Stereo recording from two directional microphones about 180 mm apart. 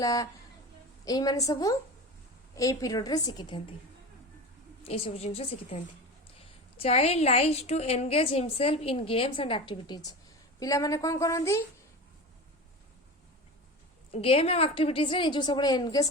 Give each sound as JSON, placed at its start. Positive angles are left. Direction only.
{"t": 0.0, "sound": "a woman's voice", "side_deg": 20}
{"t": 4.8, "sound": "a woman's voice", "side_deg": 35}
{"t": 14.1, "sound": "a woman's voice", "side_deg": 30}